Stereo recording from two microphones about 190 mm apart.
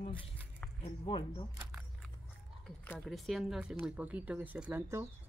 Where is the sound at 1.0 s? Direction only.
25° left (ahead or behind).